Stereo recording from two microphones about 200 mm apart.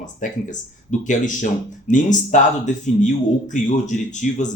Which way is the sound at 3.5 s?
40° left (ahead or behind).